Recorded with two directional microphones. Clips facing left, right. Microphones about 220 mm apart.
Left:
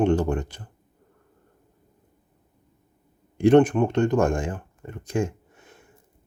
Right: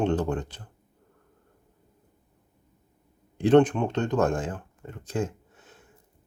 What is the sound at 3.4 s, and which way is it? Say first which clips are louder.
Speech: left 3 dB; 10° left (ahead or behind).